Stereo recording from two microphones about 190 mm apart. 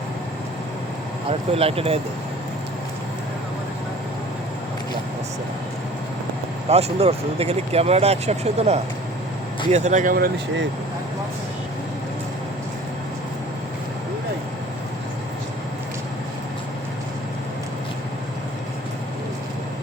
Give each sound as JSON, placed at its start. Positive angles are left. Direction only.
{"t": 1.3, "sound": "speech", "side_deg": -30}
{"t": 6.7, "sound": "speech", "side_deg": -35}